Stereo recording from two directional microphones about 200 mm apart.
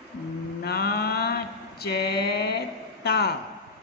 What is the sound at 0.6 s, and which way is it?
Mantra, 50° left (ahead or behind).